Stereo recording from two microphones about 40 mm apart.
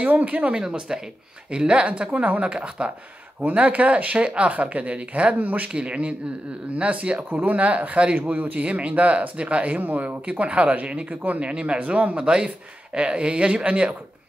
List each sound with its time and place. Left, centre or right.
0.0 s speech: right
0.6 s speech: centre; by 5.7 s right
5.7 s speech: right
7.2 s speech: right
9.8 s speech: right
11.5 s speech: right